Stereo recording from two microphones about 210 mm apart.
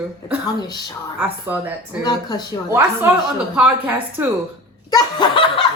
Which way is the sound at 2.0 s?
20° left (ahead or behind).